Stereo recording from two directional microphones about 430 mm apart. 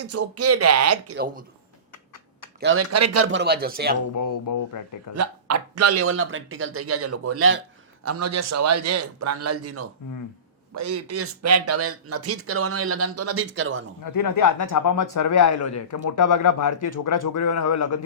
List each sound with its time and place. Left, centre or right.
0.0 s speech: right
2.6 s speech: right
4.1 s speech: left
5.1 s speech: right
14.0 s speech: left